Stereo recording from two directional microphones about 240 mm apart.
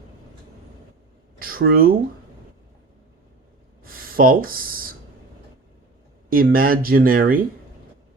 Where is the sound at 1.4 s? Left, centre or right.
Right.